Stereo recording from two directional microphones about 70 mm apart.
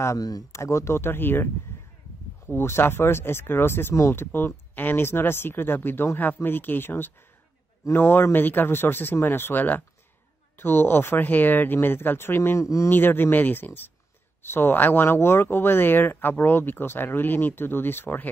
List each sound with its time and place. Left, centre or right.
0.5 s speech: left
12.6 s a man's voice: left
12.9 s speech: left